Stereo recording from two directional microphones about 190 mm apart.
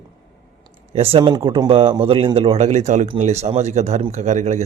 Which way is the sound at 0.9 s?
30° right (ahead or behind).